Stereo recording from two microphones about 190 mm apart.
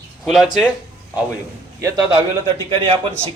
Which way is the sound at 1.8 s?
25° right (ahead or behind).